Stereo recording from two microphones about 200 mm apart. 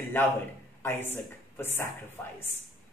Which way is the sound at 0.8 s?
10° left (ahead or behind).